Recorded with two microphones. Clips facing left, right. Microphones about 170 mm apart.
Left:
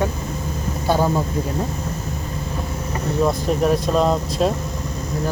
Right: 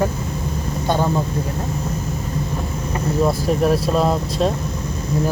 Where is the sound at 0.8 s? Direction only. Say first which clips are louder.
Left 1 dB; 5° left (ahead or behind).